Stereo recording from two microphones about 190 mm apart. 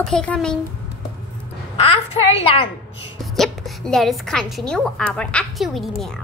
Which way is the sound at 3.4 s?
Centre (ahead or behind).